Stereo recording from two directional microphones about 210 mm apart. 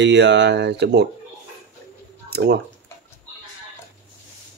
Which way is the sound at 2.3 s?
50° right (ahead or behind).